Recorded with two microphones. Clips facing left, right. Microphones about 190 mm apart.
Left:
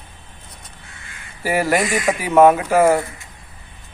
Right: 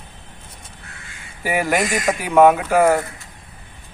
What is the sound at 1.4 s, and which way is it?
A man's voice, centre (ahead or behind).